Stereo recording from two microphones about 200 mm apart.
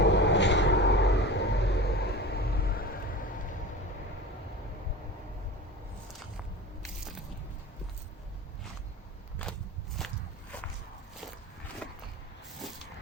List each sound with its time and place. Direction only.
0.0 s vehicle: 60° left (ahead or behind)
10.0 s walk: centre (ahead or behind)